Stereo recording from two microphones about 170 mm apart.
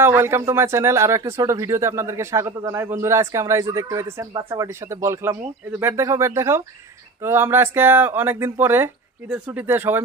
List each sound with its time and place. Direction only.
0.0 s speech: 15° right (ahead or behind)